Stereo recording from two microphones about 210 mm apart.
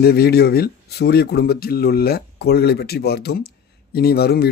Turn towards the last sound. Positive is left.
turn(degrees=50)  # may be behind; listen again after turning